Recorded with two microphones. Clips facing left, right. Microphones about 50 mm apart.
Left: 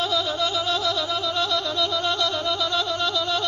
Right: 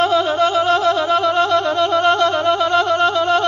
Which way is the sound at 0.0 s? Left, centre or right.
Right.